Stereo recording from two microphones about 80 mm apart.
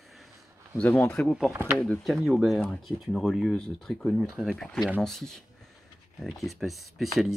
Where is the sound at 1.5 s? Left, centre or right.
Right.